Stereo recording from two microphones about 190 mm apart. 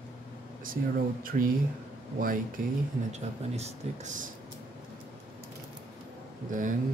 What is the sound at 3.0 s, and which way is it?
Speech, 35° right (ahead or behind).